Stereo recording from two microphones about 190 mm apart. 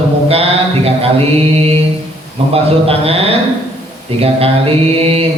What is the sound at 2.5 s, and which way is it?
Mantra, 30° right (ahead or behind).